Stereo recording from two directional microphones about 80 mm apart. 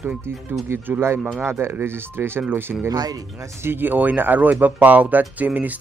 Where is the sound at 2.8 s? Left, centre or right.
Right.